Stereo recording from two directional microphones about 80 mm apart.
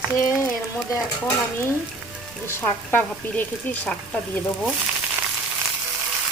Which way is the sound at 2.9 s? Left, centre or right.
Left.